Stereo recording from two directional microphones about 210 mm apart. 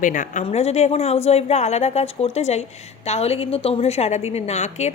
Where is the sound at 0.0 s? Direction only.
35° left (ahead or behind).